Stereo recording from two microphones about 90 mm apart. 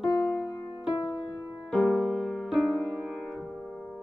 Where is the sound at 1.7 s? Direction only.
10° left (ahead or behind).